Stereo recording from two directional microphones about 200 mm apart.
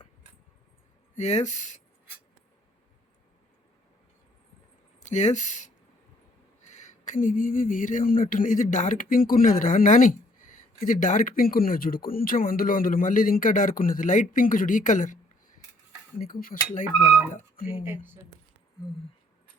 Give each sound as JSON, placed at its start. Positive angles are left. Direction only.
{"t": 1.1, "sound": "speech", "side_deg": 35}
{"t": 4.9, "sound": "speech", "side_deg": 35}
{"t": 16.2, "sound": "speech", "side_deg": 45}
{"t": 17.8, "sound": "speech", "side_deg": -10}